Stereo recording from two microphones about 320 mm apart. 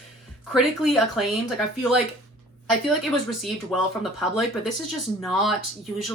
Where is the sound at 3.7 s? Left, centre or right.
Centre.